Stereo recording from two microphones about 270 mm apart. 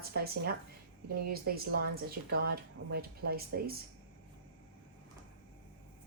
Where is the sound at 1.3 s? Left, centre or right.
Right.